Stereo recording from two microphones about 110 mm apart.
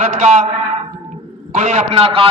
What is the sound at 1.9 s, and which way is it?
Speech, 55° right (ahead or behind).